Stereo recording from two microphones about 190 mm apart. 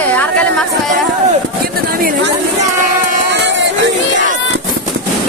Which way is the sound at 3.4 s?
70° right (ahead or behind).